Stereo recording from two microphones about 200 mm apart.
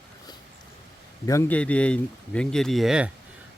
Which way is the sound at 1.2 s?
10° left (ahead or behind).